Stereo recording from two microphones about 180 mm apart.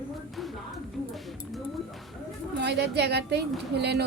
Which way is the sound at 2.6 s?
65° right (ahead or behind).